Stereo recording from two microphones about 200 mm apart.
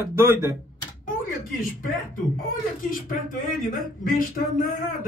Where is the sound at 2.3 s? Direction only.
45° left (ahead or behind).